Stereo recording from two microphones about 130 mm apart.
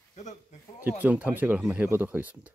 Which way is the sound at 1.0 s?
10° right (ahead or behind).